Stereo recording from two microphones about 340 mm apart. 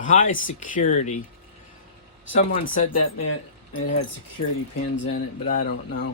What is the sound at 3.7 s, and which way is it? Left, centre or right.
Speech, left.